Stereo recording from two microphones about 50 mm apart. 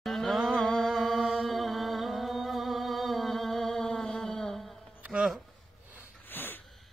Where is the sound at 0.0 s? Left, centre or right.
Centre.